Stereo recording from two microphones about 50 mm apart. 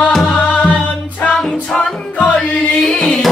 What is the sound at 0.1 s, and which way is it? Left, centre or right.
Music, centre.